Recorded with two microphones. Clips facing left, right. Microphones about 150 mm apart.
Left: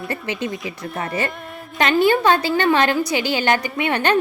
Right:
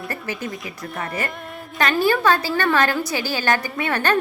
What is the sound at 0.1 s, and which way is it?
A woman's voice, 20° left (ahead or behind).